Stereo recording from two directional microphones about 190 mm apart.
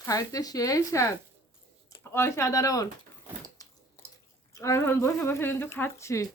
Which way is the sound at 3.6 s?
20° left (ahead or behind).